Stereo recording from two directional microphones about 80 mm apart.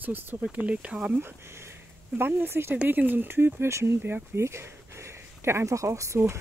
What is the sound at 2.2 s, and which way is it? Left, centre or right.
Speech, right.